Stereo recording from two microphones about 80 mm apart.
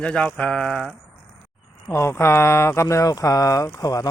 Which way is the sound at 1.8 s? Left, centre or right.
Left.